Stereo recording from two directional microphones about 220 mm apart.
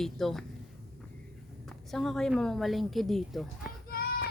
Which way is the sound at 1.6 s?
Centre (ahead or behind).